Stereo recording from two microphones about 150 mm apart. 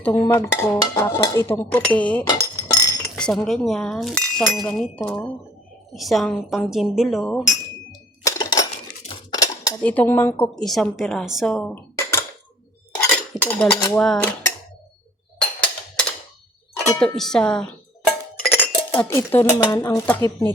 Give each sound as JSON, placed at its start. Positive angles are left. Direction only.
{"t": 0.0, "sound": "a woman's voice", "side_deg": 15}
{"t": 2.4, "sound": "chink", "side_deg": 20}
{"t": 3.2, "sound": "speech", "side_deg": 5}
{"t": 8.2, "sound": "dishes", "side_deg": 25}
{"t": 9.8, "sound": "a woman's voice", "side_deg": 10}
{"t": 13.4, "sound": "speech", "side_deg": 10}
{"t": 15.4, "sound": "a sound", "side_deg": 10}
{"t": 17.0, "sound": "speech", "side_deg": 5}
{"t": 18.4, "sound": "dishes", "side_deg": 10}